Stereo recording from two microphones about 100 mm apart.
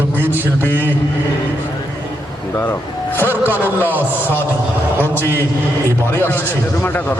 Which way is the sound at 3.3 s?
20° right (ahead or behind).